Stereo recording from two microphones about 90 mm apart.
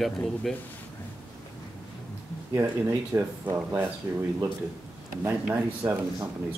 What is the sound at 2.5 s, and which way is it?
Speech, 30° right (ahead or behind).